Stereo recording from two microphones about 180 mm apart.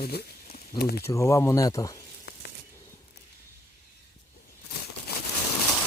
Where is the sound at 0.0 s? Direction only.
60° left (ahead or behind).